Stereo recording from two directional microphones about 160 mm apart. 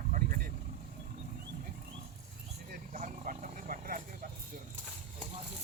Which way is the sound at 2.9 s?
55° right (ahead or behind).